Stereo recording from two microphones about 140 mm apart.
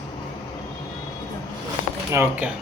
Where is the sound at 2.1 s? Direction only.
15° right (ahead or behind).